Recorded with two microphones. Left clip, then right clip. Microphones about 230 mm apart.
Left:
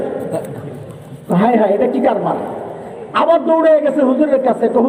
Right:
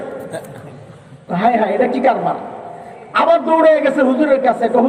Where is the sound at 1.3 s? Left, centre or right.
Right.